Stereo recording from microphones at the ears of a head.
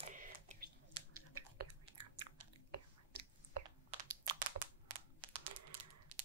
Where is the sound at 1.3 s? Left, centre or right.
Right.